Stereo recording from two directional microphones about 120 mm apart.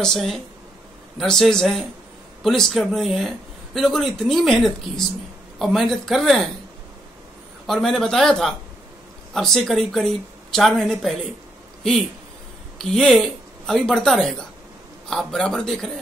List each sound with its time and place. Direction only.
0.0 s speech: centre (ahead or behind)
7.6 s speech: 5° left (ahead or behind)
12.9 s speech: 5° left (ahead or behind)